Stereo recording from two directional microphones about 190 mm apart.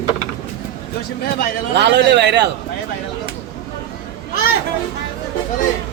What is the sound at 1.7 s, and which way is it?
Speech, 65° right (ahead or behind).